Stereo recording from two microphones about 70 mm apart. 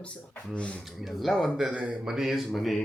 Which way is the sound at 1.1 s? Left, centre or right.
Centre.